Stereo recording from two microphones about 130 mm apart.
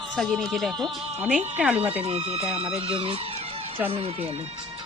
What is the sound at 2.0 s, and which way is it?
Speech, 50° right (ahead or behind).